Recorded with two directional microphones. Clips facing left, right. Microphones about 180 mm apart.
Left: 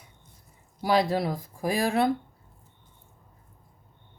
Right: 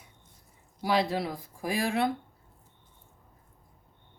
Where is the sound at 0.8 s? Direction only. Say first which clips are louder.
Left 4 dB; 40° left (ahead or behind).